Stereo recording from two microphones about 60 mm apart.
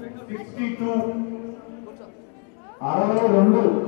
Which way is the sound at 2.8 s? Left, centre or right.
Centre.